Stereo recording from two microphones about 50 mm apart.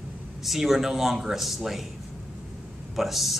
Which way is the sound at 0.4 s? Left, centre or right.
Centre.